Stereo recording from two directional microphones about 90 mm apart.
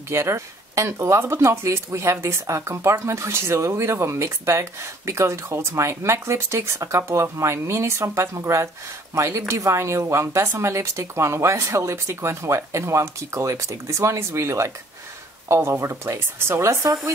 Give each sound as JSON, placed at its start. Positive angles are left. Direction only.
{"t": 0.1, "sound": "a woman's voice", "side_deg": -30}
{"t": 16.8, "sound": "speech", "side_deg": -40}